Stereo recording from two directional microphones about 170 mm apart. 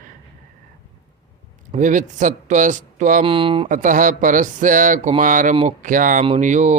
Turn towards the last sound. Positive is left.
turn(degrees=-45)  # may be behind; listen again after turning